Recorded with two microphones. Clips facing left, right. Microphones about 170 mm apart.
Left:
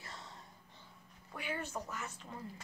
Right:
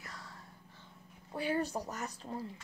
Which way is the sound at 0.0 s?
25° left (ahead or behind).